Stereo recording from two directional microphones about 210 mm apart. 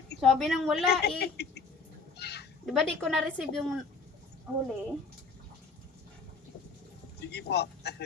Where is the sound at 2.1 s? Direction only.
50° left (ahead or behind).